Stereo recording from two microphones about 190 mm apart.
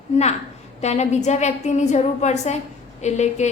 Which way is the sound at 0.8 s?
35° left (ahead or behind).